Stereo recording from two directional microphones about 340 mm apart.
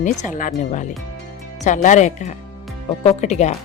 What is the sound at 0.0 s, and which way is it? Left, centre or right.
Speech, left.